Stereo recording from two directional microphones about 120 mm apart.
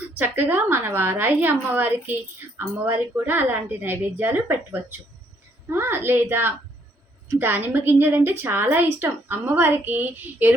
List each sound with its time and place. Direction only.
0.2 s a woman's voice: 15° right (ahead or behind)